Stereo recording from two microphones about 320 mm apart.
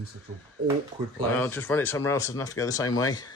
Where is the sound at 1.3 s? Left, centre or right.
Centre.